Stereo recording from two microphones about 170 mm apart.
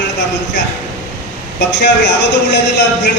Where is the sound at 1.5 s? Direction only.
90° left.